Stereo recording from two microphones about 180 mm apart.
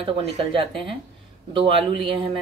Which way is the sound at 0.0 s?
30° right (ahead or behind).